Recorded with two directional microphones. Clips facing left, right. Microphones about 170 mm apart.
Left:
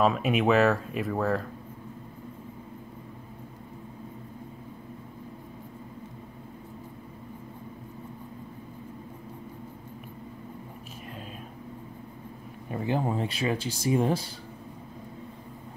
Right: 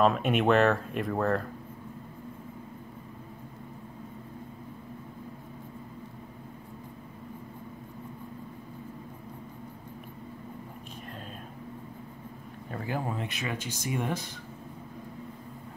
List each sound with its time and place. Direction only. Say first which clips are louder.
0.0 s speech: even; centre (ahead or behind)
12.7 s speech: left 5 dB; 25° left (ahead or behind)